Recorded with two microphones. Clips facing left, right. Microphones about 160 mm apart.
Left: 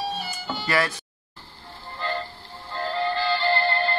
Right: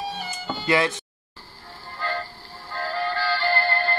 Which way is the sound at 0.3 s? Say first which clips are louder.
Right 7 dB; 20° right (ahead or behind).